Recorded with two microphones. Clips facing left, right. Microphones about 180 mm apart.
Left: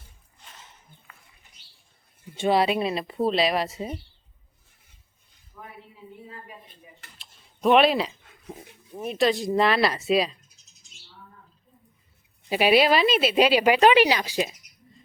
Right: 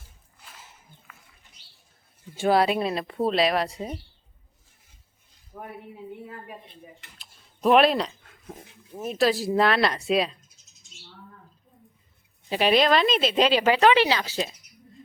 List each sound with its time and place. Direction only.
0.0 s a sound: 10° right (ahead or behind)
2.3 s speech: 5° right (ahead or behind)
5.5 s speech: 60° right (ahead or behind)
7.2 s a sound: centre (ahead or behind)
9.0 s speech: centre (ahead or behind)
12.5 s speech: 10° left (ahead or behind)